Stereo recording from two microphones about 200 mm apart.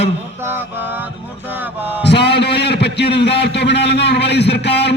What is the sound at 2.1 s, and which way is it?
A man's voice, 55° left (ahead or behind).